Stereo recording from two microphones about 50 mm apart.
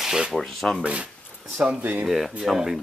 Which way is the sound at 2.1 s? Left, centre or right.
Centre.